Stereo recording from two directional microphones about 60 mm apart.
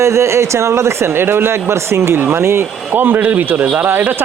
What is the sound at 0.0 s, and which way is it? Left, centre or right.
A man's voice, right.